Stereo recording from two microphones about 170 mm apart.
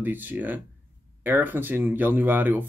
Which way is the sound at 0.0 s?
10° right (ahead or behind).